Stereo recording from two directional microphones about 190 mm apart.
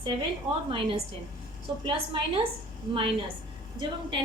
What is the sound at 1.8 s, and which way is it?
Speech, 30° right (ahead or behind).